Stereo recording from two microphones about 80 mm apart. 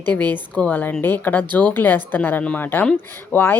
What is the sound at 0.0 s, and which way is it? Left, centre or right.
Speech, left.